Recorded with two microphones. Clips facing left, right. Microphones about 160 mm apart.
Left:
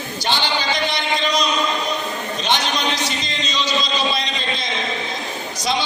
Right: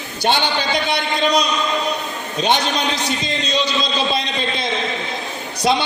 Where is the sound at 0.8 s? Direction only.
60° right (ahead or behind).